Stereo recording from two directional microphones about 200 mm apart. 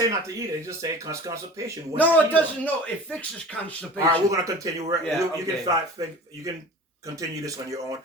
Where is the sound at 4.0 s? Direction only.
15° right (ahead or behind).